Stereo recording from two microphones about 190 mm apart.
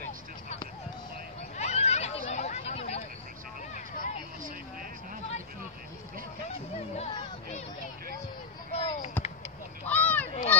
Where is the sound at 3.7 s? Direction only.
40° left (ahead or behind).